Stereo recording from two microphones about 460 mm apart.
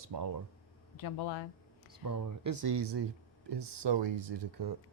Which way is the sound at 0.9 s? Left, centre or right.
Left.